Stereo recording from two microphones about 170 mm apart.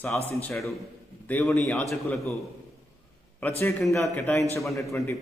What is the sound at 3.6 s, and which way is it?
A man's voice, centre (ahead or behind).